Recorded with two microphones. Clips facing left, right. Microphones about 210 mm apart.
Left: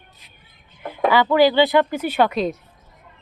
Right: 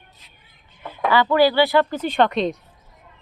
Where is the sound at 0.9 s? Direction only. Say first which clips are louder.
Left 2 dB; 15° left (ahead or behind).